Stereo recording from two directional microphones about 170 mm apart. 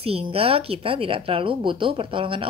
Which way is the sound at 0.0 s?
35° right (ahead or behind).